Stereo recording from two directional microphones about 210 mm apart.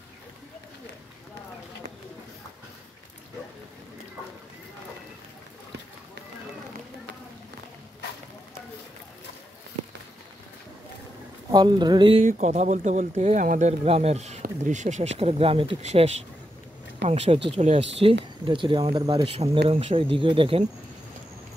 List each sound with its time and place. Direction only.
11.5 s speech: 20° right (ahead or behind)
12.3 s speech: 35° right (ahead or behind)